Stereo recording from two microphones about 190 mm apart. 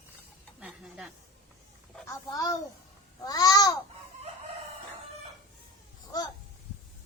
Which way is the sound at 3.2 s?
20° left (ahead or behind).